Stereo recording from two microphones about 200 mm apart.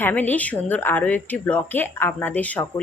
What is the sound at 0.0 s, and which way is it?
A woman's voice, 10° left (ahead or behind).